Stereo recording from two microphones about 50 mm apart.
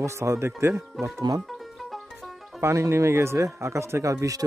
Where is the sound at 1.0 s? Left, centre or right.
Centre.